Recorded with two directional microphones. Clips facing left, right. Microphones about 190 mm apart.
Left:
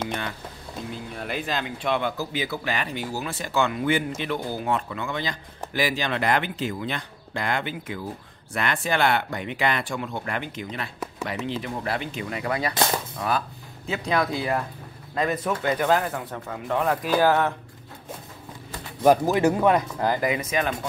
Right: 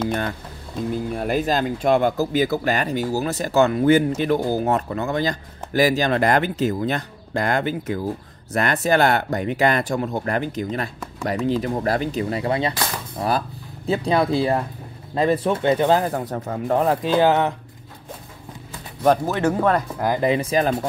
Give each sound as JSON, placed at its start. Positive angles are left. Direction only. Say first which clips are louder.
{"t": 0.9, "sound": "speech", "louder": "right 10 dB", "side_deg": -45}
{"t": 19.0, "sound": "speech", "louder": "even", "side_deg": 10}
{"t": 20.2, "sound": "speech", "louder": "right 6 dB", "side_deg": -30}